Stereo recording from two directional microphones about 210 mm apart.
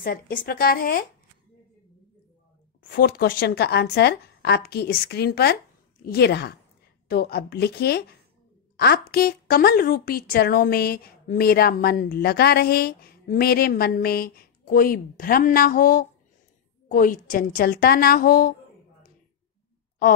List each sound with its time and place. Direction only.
0.0 s a woman's voice: 40° left (ahead or behind)
2.9 s a woman's voice: 45° left (ahead or behind)